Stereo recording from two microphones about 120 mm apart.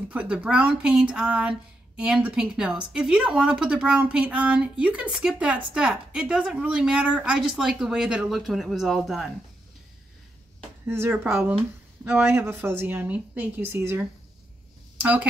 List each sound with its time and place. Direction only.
0.1 s a woman's voice: 10° right (ahead or behind)
10.9 s a woman's voice: 20° right (ahead or behind)